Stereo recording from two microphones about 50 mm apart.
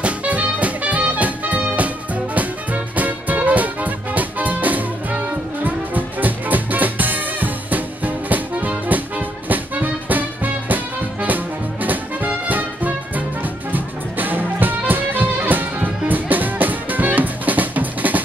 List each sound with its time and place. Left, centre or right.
0.0 s music: right